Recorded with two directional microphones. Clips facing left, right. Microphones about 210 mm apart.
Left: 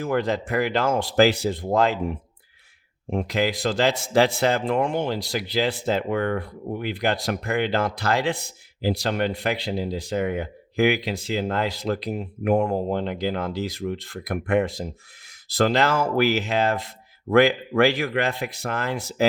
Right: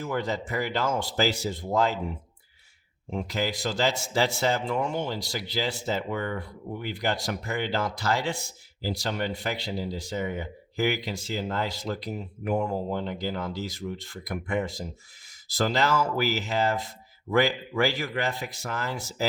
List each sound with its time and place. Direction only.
0.0 s speech: 55° left (ahead or behind)
3.1 s speech: 55° left (ahead or behind)
12.9 s speech: 70° left (ahead or behind); by 19.2 s 55° left (ahead or behind)